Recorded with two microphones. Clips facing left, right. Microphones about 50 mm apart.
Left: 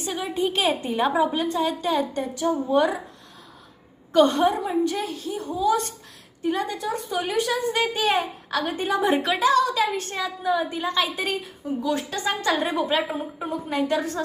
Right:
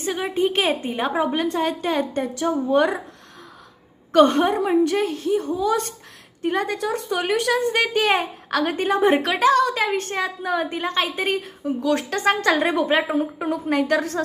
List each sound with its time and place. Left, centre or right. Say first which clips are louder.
0.0 s a woman's voice: right 4 dB; right
1.2 s speech: right 1 dB; right
4.1 s speech: right 3 dB; right
8.9 s speech: right 3 dB; right
11.6 s a woman's voice: right 3 dB; right
13.1 s speech: right 6 dB; right